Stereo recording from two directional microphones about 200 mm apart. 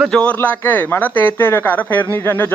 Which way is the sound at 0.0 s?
5° left (ahead or behind).